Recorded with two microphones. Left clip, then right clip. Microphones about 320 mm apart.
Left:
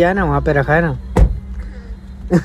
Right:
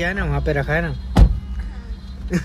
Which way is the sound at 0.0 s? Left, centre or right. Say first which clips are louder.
Left 8 dB; centre.